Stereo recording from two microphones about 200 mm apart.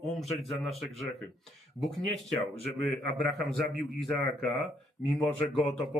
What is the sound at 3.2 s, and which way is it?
Speech, centre (ahead or behind).